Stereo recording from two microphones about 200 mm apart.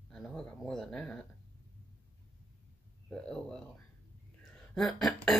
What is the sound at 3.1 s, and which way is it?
Speech, 5° left (ahead or behind).